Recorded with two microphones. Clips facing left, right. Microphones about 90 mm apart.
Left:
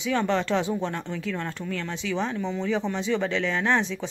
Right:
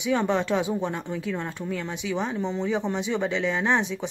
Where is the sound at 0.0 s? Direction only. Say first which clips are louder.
Right 1 dB; 15° right (ahead or behind).